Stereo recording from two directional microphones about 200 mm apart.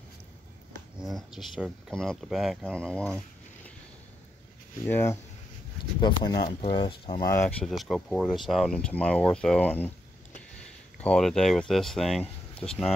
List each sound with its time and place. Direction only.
0.9 s speech: centre (ahead or behind)
4.8 s speech: 10° left (ahead or behind)
5.9 s speech: 20° left (ahead or behind)
7.2 s speech: 10° left (ahead or behind)
11.0 s speech: 5° left (ahead or behind)